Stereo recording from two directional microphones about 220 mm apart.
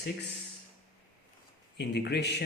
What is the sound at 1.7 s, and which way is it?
Speech, 50° left (ahead or behind).